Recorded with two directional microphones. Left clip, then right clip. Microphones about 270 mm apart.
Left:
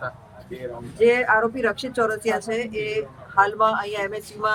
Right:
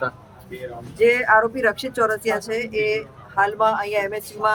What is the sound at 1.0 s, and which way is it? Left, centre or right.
Speech, centre.